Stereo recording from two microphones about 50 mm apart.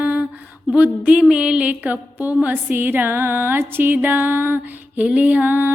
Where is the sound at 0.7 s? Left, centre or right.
Right.